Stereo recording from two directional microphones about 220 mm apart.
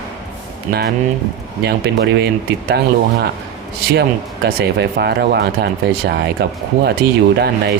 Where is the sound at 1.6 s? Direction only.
50° right (ahead or behind).